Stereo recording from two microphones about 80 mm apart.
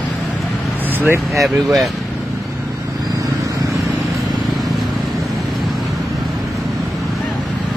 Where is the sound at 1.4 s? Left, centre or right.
Centre.